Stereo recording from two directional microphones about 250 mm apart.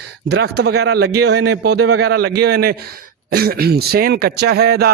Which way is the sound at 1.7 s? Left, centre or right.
Right.